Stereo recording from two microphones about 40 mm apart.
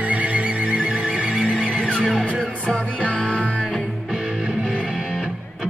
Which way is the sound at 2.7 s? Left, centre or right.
Left.